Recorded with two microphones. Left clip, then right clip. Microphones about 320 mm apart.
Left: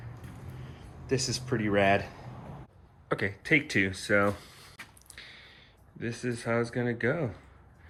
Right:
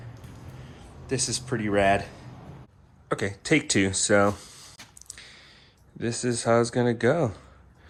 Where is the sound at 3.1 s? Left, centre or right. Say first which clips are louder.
Right 2 dB; centre.